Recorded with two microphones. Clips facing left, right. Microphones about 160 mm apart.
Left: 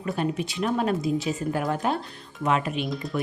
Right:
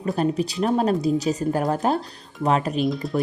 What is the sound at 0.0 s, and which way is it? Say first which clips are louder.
Speech: right 5 dB; 35° right (ahead or behind).